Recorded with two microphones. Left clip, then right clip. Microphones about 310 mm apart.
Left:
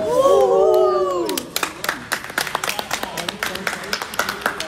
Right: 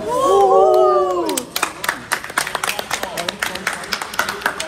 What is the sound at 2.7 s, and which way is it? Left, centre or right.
Run, right.